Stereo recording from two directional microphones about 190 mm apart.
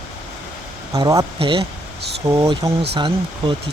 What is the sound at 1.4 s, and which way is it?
Speech, 30° right (ahead or behind).